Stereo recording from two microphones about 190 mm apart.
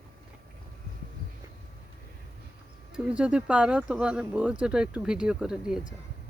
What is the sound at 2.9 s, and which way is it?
Speech, 5° right (ahead or behind).